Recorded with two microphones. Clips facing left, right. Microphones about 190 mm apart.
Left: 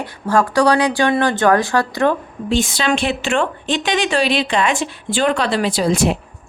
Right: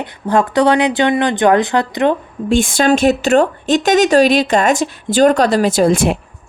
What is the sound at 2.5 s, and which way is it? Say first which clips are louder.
A woman's voice: right 5 dB; 50° right (ahead or behind).